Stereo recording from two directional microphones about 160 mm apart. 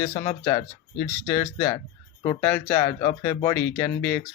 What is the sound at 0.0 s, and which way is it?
Speech, 20° left (ahead or behind).